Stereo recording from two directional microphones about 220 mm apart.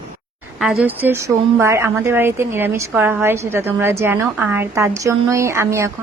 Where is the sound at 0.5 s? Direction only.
5° right (ahead or behind).